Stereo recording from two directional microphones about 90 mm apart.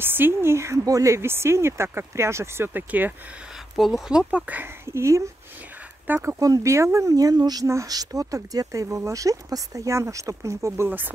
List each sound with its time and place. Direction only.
0.0 s speech: 25° right (ahead or behind)
3.7 s speech: centre (ahead or behind)
4.3 s speech: 15° right (ahead or behind)
4.8 s speech: 30° right (ahead or behind)
6.4 s speech: 35° right (ahead or behind)
7.6 s speech: 35° right (ahead or behind)
10.9 s speech: 20° right (ahead or behind)